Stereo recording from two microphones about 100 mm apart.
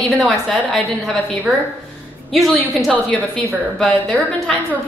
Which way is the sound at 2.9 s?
15° left (ahead or behind).